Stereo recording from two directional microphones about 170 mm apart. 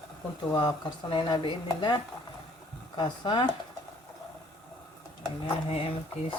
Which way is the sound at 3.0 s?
30° left (ahead or behind).